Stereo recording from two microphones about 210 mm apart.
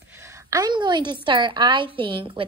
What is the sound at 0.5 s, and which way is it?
A woman's voice, 20° right (ahead or behind).